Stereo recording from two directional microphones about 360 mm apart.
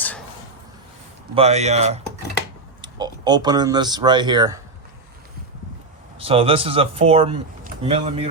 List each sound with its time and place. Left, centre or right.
1.4 s speech: centre
6.1 s speech: centre